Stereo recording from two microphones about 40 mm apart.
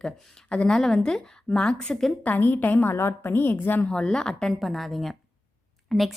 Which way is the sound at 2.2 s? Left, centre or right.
Left.